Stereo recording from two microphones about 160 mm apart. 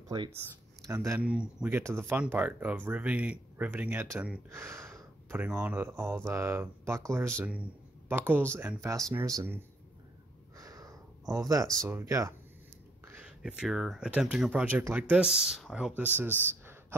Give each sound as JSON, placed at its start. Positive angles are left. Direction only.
{"t": 0.1, "sound": "speech", "side_deg": -25}
{"t": 1.2, "sound": "speech", "side_deg": -5}
{"t": 10.6, "sound": "a sound", "side_deg": -20}
{"t": 11.8, "sound": "speech", "side_deg": -20}
{"t": 13.4, "sound": "speech", "side_deg": -5}